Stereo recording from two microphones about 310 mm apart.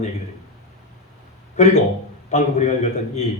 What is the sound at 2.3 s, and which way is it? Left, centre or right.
Speech, left.